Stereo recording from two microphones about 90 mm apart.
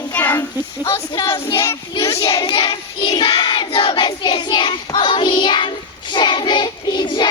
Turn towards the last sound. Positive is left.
turn(degrees=55)  # may be behind; listen again after turning